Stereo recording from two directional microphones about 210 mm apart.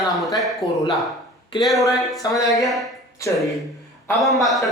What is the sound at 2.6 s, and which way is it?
Speech, centre (ahead or behind).